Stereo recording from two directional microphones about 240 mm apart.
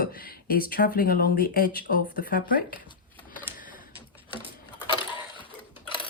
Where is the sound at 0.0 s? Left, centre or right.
Left.